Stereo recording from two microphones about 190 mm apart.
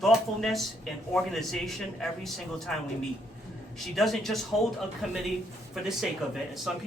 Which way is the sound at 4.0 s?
Centre (ahead or behind).